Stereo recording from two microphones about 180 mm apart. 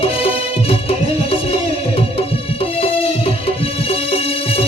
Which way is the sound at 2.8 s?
30° left (ahead or behind).